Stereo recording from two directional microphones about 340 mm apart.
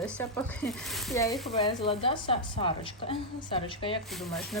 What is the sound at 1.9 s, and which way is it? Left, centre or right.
A woman's voice, centre.